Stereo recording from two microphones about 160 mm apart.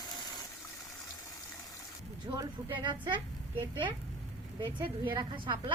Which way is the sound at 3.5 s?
15° right (ahead or behind).